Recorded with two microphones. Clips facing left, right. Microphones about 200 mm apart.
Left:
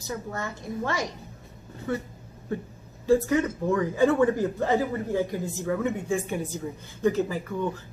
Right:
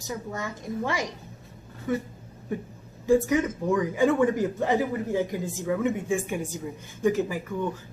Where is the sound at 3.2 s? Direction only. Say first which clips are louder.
Even; 15° right (ahead or behind).